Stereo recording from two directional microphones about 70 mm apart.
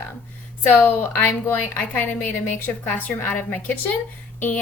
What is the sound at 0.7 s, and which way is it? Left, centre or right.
Speech, left.